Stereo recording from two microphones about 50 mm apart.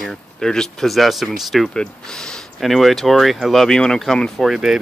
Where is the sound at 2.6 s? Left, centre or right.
Centre.